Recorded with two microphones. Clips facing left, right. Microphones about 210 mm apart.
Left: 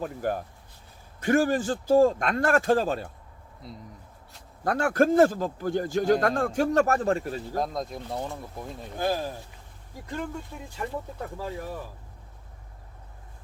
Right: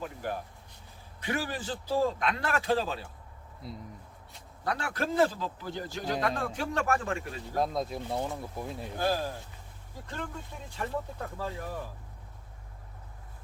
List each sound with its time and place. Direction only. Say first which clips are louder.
0.0 s a man's voice: left 6 dB; 45° left (ahead or behind)
3.6 s speech: right 1 dB; centre (ahead or behind)
4.6 s a man's voice: left 10 dB; 50° left (ahead or behind)
7.5 s speech: right 2 dB; 5° right (ahead or behind)
9.0 s speech: left 2 dB; 15° left (ahead or behind)